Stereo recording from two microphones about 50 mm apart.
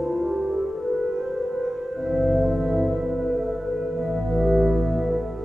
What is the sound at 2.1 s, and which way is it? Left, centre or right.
Music, centre.